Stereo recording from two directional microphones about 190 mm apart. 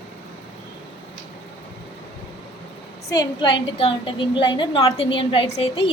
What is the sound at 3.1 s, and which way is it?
A woman's voice, 25° left (ahead or behind).